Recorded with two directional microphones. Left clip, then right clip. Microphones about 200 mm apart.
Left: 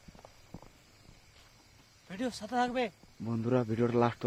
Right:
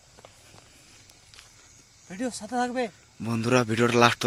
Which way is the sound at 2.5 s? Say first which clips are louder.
Right 3 dB; 30° left (ahead or behind).